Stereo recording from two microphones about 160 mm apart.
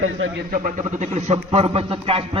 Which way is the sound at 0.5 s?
50° right (ahead or behind).